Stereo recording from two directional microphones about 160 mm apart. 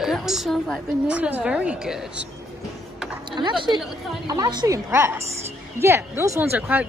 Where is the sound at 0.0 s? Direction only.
Centre (ahead or behind).